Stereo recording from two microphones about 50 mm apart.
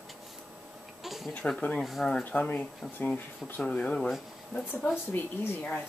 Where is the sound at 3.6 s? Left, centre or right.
Left.